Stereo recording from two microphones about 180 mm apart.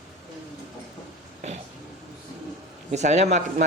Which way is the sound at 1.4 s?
40° right (ahead or behind).